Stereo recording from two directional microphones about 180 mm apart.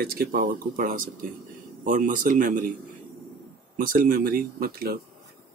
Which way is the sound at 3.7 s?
50° right (ahead or behind).